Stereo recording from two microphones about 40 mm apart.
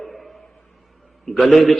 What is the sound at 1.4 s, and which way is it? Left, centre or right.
Speech, centre.